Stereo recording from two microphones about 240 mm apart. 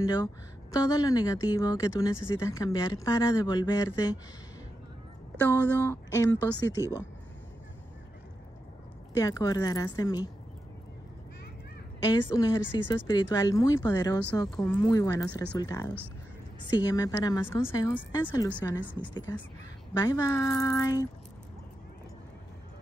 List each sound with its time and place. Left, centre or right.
0.0 s speech: centre
5.4 s speech: centre
9.1 s speech: centre
12.0 s speech: centre